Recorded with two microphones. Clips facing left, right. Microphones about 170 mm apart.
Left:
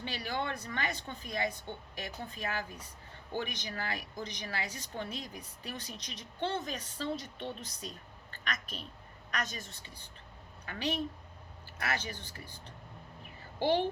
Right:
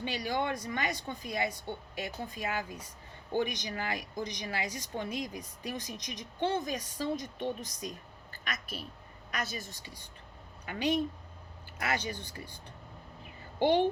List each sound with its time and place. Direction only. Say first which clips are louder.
0.0 s a woman's voice: right 4 dB; 15° right (ahead or behind)
13.6 s a woman's voice: right 4 dB; 15° right (ahead or behind)